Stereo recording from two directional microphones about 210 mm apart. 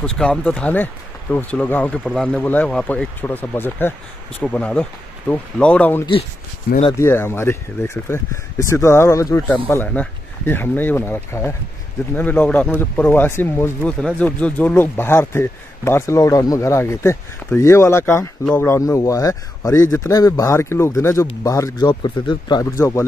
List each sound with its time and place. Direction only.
0.0 s speech: 5° left (ahead or behind)